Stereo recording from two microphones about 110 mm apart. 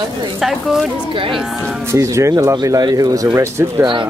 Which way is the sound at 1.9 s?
25° right (ahead or behind).